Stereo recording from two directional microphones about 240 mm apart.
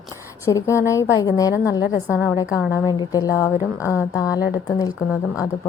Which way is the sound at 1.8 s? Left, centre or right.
Centre.